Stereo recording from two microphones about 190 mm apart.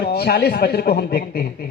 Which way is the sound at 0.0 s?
55° left (ahead or behind).